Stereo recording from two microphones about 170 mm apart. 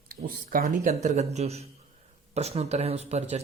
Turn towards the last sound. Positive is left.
turn(degrees=-40)  # may be behind; listen again after turning